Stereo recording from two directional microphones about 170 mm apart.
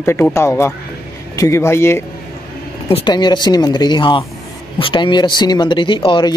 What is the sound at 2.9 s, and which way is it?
Speech, 25° left (ahead or behind).